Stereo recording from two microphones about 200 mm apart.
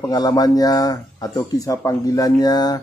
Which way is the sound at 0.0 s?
20° left (ahead or behind).